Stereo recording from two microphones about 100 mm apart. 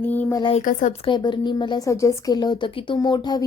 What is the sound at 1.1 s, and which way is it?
Speech, 50° left (ahead or behind).